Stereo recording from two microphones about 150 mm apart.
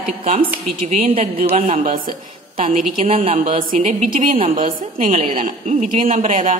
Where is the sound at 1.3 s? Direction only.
40° right (ahead or behind).